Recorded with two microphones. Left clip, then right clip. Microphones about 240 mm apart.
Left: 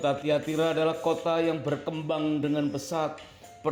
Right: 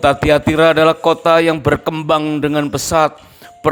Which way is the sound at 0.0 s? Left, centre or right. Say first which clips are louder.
Right 14 dB; right.